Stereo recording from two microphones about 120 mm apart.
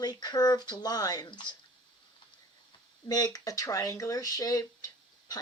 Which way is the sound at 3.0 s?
35° left (ahead or behind).